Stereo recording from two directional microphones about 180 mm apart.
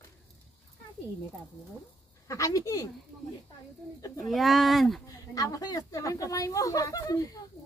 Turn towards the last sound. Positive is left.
turn(degrees=20)  # may be behind; listen again after turning